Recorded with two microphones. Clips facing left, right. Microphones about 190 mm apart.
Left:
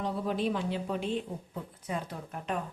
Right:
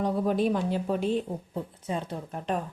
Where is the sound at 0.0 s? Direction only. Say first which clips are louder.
Right 6 dB; 45° right (ahead or behind).